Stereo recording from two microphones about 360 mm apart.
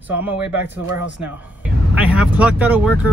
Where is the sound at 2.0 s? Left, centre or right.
Centre.